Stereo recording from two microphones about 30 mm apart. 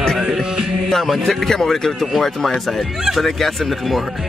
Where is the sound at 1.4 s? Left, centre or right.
Centre.